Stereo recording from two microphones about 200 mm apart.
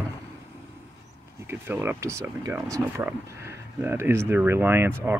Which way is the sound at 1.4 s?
10° right (ahead or behind).